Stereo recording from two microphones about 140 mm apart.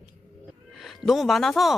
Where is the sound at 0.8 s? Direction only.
Centre (ahead or behind).